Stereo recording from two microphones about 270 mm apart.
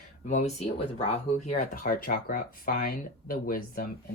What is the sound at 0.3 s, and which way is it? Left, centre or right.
Speech, left.